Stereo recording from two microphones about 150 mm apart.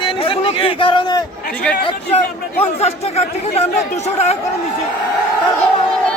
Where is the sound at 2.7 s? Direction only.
45° left (ahead or behind).